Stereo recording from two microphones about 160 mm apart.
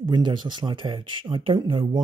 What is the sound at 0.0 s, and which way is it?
Speech, 30° right (ahead or behind).